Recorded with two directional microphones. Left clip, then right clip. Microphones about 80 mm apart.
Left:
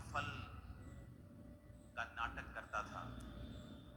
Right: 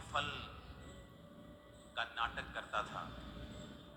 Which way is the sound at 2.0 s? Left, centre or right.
Right.